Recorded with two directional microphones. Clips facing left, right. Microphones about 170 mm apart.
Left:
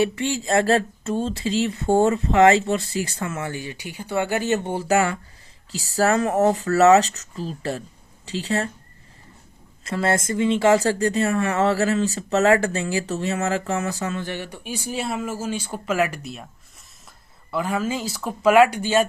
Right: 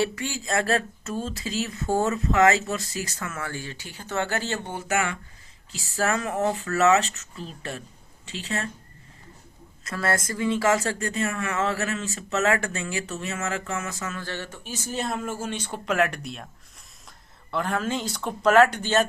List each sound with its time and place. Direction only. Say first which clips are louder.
0.0 s speech: left 5 dB; 25° left (ahead or behind)
9.8 s speech: left 5 dB; 25° left (ahead or behind)
14.2 s speech: left 4 dB; 15° left (ahead or behind)
17.5 s speech: left 2 dB; 5° left (ahead or behind)